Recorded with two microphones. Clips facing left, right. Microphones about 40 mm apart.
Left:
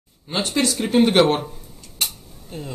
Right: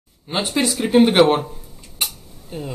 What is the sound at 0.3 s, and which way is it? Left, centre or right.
Speech, centre.